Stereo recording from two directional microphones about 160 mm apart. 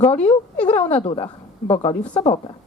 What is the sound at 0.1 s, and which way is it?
Speech, 40° left (ahead or behind).